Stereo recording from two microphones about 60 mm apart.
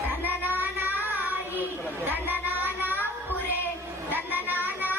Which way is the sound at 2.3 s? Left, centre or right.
Right.